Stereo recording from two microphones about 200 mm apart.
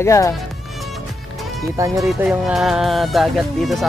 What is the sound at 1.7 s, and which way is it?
Speech, 15° right (ahead or behind).